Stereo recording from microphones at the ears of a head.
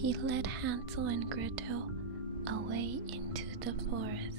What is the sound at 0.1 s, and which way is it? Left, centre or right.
Speech, right.